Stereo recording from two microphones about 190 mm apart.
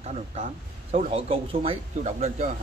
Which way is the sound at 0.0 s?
35° right (ahead or behind).